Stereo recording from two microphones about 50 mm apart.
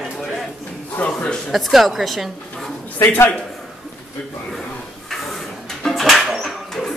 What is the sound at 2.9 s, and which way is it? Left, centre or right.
Speech, left.